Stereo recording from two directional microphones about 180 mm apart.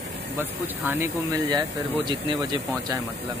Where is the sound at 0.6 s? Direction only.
10° right (ahead or behind).